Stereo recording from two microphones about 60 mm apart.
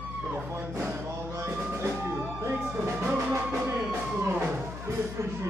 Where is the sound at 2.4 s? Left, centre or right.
Right.